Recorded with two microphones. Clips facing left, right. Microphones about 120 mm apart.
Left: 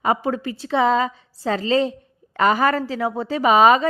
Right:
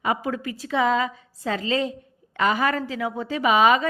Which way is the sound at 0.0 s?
35° left (ahead or behind).